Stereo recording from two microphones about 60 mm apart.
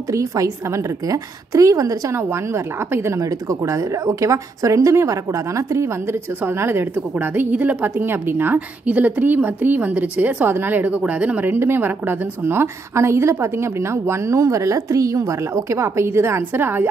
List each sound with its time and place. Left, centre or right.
0.1 s a woman's voice: right
2.1 s a woman's voice: right
3.2 s a woman's voice: right
6.4 s a woman's voice: right
8.5 s a woman's voice: right
11.5 s a woman's voice: right